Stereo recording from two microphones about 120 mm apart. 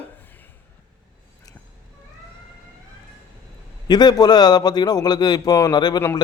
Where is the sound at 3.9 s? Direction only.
35° left (ahead or behind).